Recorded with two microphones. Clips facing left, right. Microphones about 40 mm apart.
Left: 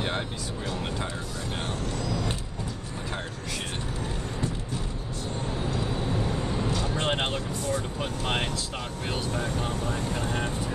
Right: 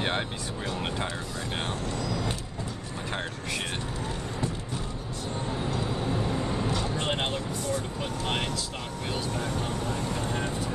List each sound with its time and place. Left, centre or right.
0.7 s speech: right
5.9 s vehicle: centre
7.1 s vehicle: left